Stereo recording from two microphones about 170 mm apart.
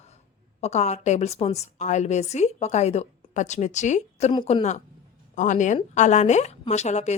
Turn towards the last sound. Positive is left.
turn(degrees=40)  # may be behind; listen again after turning